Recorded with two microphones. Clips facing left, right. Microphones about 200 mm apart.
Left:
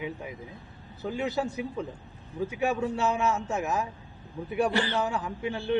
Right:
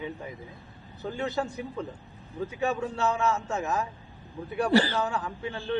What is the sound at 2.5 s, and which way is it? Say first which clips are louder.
Speech: left 1 dB; 15° left (ahead or behind).